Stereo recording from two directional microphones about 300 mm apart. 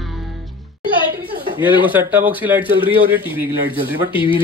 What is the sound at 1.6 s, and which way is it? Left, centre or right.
Speech, centre.